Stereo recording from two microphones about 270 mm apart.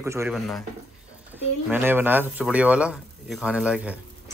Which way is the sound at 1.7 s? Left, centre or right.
Centre.